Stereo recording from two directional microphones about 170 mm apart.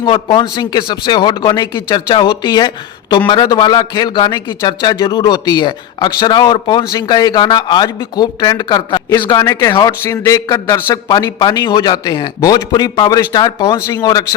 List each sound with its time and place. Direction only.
0.0 s a man's voice: 25° left (ahead or behind)
9.0 s a man's voice: 15° left (ahead or behind)